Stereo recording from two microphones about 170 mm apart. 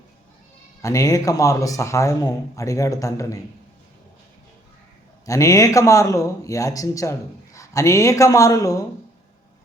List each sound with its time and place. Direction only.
0.8 s speech: 20° left (ahead or behind)
5.2 s speech: 20° left (ahead or behind)